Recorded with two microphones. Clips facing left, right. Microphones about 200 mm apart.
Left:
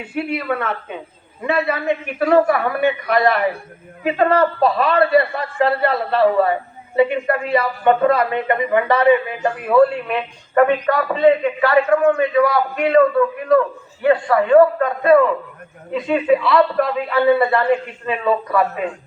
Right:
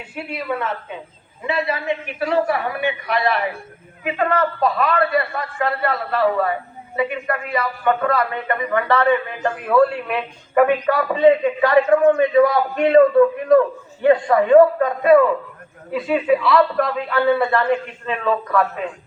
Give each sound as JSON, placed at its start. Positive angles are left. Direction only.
{"t": 0.1, "sound": "a woman's voice", "side_deg": 60}